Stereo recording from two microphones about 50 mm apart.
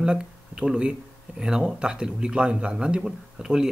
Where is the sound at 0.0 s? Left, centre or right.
Centre.